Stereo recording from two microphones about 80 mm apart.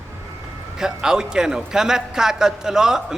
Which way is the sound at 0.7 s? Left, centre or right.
Centre.